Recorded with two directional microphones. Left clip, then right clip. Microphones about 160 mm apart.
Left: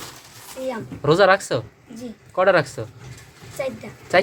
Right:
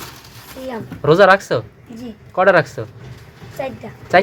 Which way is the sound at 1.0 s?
Centre (ahead or behind).